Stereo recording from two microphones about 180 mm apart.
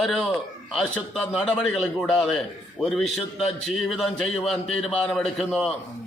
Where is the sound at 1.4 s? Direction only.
5° left (ahead or behind).